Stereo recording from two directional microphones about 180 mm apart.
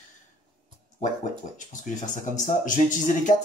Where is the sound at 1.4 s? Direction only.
40° left (ahead or behind).